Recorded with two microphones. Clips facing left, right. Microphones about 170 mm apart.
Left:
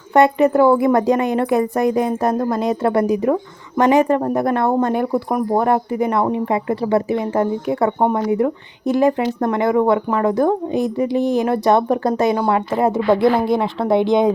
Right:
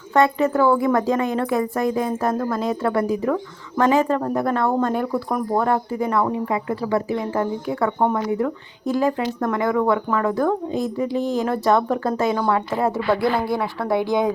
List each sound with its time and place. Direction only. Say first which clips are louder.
0.1 s a woman's voice: left 4 dB; 15° left (ahead or behind)